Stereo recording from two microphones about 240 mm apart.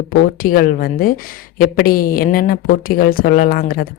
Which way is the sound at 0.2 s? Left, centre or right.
Left.